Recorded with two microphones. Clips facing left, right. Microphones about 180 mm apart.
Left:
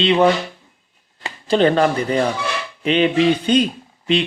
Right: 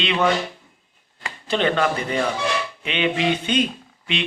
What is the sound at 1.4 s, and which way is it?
Speech, 40° left (ahead or behind).